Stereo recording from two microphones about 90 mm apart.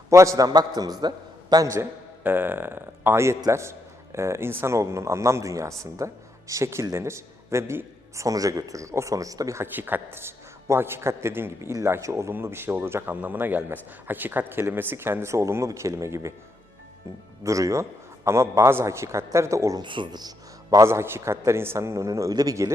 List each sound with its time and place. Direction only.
0.1 s a man's voice: 35° right (ahead or behind)
1.6 s a man's voice: 30° right (ahead or behind)
9.7 s a man's voice: 20° right (ahead or behind)
17.4 s a man's voice: 35° right (ahead or behind)
19.8 s speech: 60° right (ahead or behind); by 20.8 s 45° right (ahead or behind)
20.8 s a man's voice: 30° right (ahead or behind)